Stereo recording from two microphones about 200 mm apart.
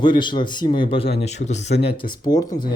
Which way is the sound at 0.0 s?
25° left (ahead or behind).